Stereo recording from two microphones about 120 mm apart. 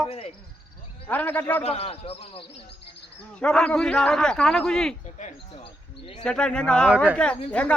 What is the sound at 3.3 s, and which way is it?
A man's voice, 5° left (ahead or behind).